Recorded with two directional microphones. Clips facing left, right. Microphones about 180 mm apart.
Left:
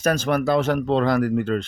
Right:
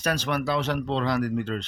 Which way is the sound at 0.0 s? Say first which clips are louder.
Left 6 dB; 45° left (ahead or behind).